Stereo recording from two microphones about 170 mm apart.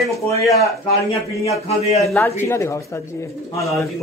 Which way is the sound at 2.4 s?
15° left (ahead or behind).